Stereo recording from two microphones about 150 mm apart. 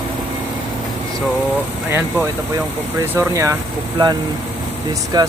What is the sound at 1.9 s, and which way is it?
Speech, 15° right (ahead or behind).